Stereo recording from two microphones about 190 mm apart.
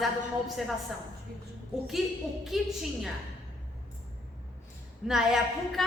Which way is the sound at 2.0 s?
5° right (ahead or behind).